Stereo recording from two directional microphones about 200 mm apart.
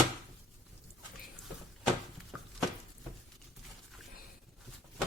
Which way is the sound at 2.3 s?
Centre (ahead or behind).